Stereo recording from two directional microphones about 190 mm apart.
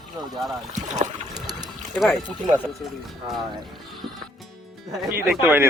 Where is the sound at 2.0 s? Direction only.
Centre (ahead or behind).